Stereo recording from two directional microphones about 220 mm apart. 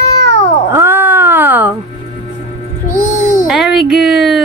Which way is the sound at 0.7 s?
10° right (ahead or behind).